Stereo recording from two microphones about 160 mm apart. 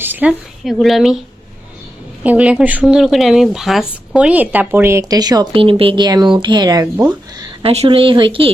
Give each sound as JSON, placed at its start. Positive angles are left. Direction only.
{"t": 0.0, "sound": "speech", "side_deg": -10}
{"t": 2.2, "sound": "a woman's voice", "side_deg": -10}
{"t": 7.6, "sound": "speech", "side_deg": -40}